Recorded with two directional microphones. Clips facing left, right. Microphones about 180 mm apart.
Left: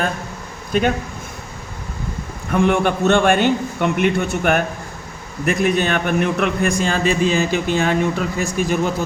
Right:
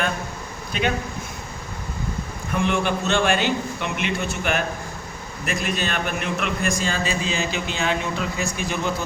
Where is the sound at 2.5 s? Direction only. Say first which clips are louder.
Left 6 dB; 55° left (ahead or behind).